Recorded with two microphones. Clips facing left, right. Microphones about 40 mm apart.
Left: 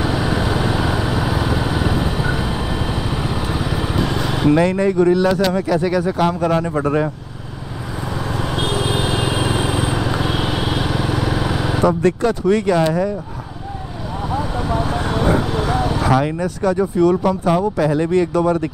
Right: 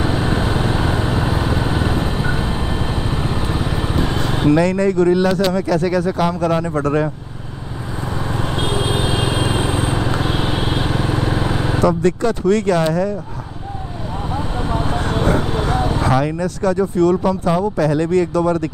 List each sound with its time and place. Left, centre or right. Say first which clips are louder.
0.2 s vehicle: even; centre
1.4 s vehicle: even; centre
3.5 s vehicle: even; centre
4.5 s speech: even; centre
8.6 s vehicle: even; right
9.1 s vehicle: even; centre
10.0 s vehicle: even; centre
10.6 s vehicle: even; centre
11.9 s speech: even; centre
15.6 s vehicle: even; centre
16.0 s speech: left 1 dB; centre